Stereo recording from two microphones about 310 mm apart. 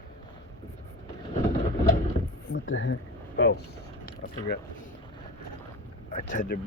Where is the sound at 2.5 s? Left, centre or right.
Left.